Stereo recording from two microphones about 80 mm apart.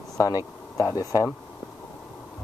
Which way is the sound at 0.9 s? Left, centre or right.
Left.